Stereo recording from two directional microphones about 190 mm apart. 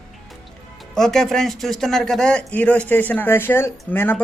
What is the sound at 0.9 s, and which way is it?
A man's voice, centre (ahead or behind).